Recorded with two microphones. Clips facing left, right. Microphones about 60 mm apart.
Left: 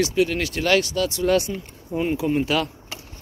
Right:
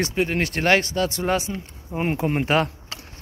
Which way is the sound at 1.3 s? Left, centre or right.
Centre.